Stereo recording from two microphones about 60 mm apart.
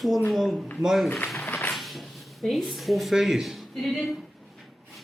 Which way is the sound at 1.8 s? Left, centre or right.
Centre.